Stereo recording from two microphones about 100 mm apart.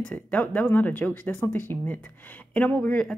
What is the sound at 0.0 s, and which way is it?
A woman's voice, 15° left (ahead or behind).